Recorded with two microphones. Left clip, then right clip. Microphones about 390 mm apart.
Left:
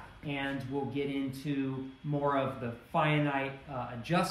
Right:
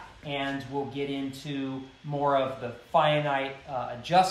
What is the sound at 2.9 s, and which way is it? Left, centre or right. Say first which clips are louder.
A man's voice: right 6 dB; centre.